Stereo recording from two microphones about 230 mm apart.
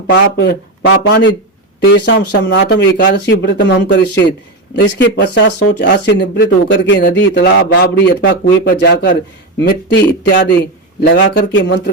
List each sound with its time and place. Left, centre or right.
0.1 s speech: left